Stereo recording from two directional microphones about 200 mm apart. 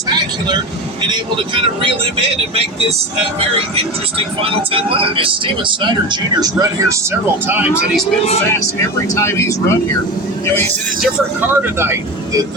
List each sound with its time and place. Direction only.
4.7 s speech: 25° right (ahead or behind); by 8.0 s 5° right (ahead or behind)
9.1 s speech: 15° left (ahead or behind)
11.0 s speech: 10° right (ahead or behind)